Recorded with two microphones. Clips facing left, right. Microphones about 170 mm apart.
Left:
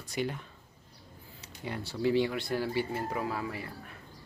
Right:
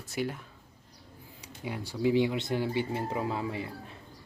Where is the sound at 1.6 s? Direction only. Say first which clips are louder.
Right 1 dB; 10° right (ahead or behind).